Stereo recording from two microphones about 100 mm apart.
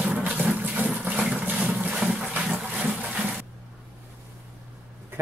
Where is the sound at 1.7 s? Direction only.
5° right (ahead or behind).